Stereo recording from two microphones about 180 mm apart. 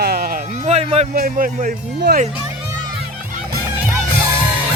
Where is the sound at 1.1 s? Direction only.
50° right (ahead or behind).